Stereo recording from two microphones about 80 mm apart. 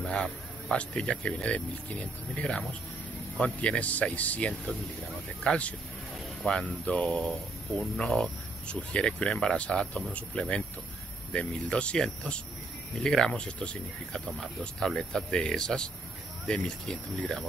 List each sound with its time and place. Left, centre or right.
0.0 s speech: centre
8.0 s speech: centre